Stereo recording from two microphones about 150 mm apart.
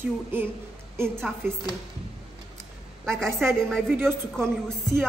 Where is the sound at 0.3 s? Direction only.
15° right (ahead or behind).